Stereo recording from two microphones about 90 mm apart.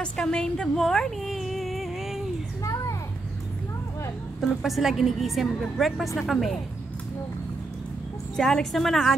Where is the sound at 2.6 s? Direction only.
40° left (ahead or behind).